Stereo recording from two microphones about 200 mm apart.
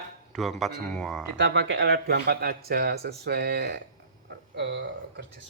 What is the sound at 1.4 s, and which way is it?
Speech, 65° right (ahead or behind).